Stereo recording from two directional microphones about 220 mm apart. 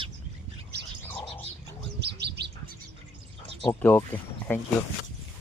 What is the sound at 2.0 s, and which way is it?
Bird, 50° right (ahead or behind).